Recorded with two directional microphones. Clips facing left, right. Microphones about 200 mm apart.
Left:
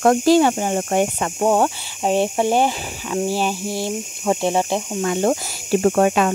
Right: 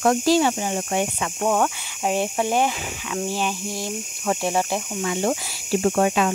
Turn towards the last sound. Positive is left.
turn(degrees=55)  # may be behind; listen again after turning